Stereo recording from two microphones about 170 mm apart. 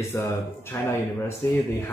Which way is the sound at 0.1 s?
10° left (ahead or behind).